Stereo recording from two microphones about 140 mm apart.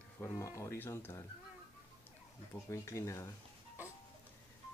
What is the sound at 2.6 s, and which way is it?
Speech, 20° left (ahead or behind).